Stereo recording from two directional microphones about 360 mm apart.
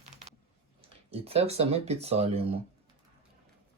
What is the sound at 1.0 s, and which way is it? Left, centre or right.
Speech, centre.